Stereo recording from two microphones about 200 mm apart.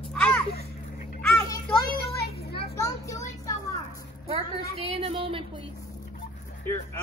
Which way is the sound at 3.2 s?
15° left (ahead or behind).